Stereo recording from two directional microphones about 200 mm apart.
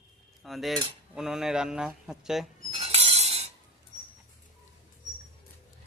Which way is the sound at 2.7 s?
30° right (ahead or behind).